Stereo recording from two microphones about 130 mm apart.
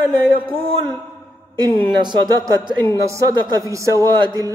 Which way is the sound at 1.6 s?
30° right (ahead or behind).